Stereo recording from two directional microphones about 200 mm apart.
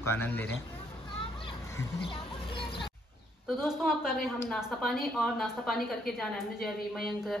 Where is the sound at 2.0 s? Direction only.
25° left (ahead or behind).